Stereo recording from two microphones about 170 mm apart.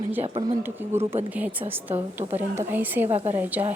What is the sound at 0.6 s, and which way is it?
Speech, 15° right (ahead or behind).